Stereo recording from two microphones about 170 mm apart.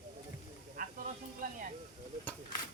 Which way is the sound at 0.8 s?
55° right (ahead or behind).